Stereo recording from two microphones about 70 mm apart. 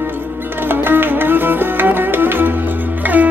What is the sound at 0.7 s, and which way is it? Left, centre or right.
Music, right.